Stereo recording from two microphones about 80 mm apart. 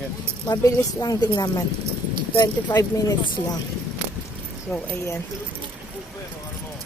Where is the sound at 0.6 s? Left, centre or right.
Left.